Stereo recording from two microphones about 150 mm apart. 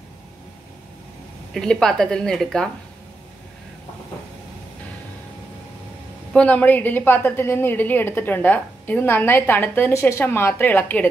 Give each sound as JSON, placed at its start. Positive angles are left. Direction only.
{"t": 1.5, "sound": "a woman's voice", "side_deg": 5}
{"t": 6.3, "sound": "a woman's voice", "side_deg": 10}